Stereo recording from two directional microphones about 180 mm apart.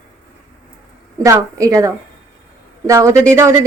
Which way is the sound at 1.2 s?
20° right (ahead or behind).